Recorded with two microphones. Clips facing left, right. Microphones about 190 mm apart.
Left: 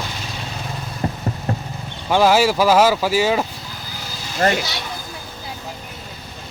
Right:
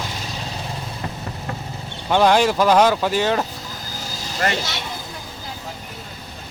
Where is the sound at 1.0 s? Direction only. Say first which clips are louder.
Left 9 dB; 35° left (ahead or behind).